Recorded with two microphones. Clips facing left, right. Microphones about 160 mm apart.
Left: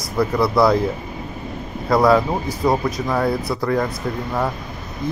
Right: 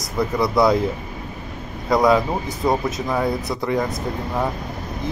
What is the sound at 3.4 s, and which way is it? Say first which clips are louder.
Speech: left 2 dB; 20° right (ahead or behind).